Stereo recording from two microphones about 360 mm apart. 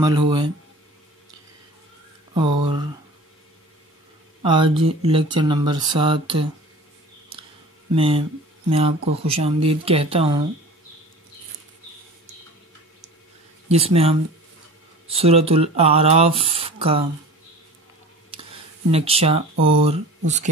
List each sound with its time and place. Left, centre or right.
0.0 s speech: centre
2.3 s speech: centre
4.4 s speech: centre
7.9 s speech: centre
13.7 s speech: centre
18.3 s a sound: centre
18.9 s speech: centre